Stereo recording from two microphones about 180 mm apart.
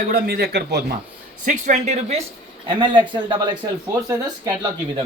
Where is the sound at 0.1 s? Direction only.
60° right (ahead or behind).